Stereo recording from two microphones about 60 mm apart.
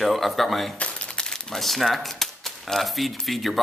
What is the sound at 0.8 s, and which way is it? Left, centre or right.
Speech, centre.